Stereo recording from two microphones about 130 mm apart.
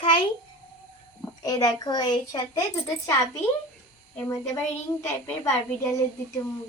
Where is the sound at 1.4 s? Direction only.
30° left (ahead or behind).